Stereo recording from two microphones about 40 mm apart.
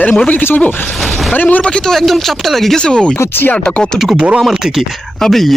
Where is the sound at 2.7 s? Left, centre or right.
Left.